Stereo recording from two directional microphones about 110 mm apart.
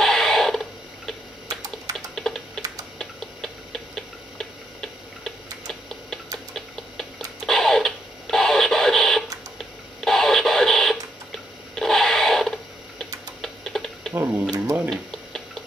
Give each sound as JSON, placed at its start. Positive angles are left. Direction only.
{"t": 0.0, "sound": "a sound", "side_deg": 5}
{"t": 1.5, "sound": "typing", "side_deg": -30}
{"t": 2.0, "sound": "typing", "side_deg": 5}
{"t": 3.0, "sound": "tick-tock", "side_deg": 5}
{"t": 9.9, "sound": "radio", "side_deg": 5}
{"t": 13.0, "sound": "typing", "side_deg": 5}
{"t": 14.1, "sound": "tick-tock", "side_deg": -20}
{"t": 14.9, "sound": "tick-tock", "side_deg": 5}